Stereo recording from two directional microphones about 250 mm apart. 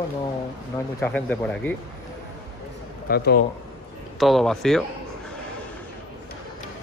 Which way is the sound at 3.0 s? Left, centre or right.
Left.